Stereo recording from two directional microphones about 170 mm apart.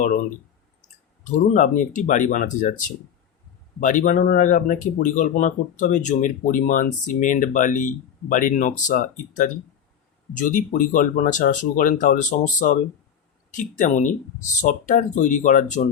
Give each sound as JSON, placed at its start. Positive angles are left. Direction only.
{"t": 0.8, "sound": "speech", "side_deg": 45}